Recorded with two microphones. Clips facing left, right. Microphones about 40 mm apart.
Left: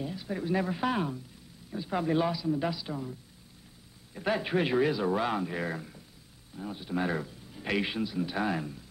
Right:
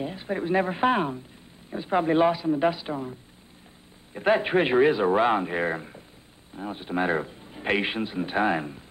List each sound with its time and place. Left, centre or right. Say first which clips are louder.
0.0 s speech: right 5 dB; right